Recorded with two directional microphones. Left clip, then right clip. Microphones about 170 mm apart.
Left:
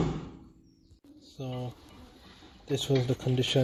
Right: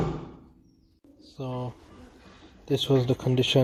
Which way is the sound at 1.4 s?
5° right (ahead or behind).